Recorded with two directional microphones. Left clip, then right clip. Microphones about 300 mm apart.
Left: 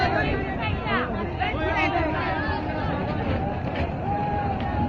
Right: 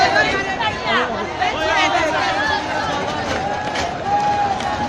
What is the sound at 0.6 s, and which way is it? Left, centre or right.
Chatter, centre.